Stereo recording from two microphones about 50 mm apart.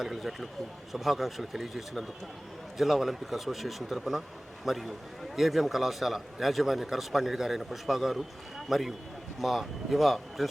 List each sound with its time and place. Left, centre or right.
0.0 s a man's voice: centre